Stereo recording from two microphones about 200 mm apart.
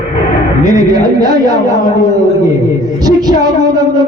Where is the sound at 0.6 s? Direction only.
20° right (ahead or behind).